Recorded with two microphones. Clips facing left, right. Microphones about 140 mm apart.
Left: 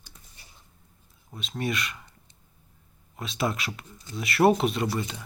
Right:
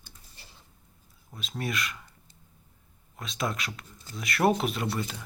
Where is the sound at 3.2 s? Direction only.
5° left (ahead or behind).